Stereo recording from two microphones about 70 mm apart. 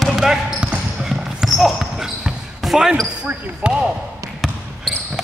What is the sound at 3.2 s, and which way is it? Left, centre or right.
Speech, centre.